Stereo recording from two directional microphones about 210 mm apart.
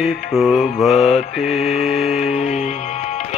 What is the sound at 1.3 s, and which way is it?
Music, 30° left (ahead or behind).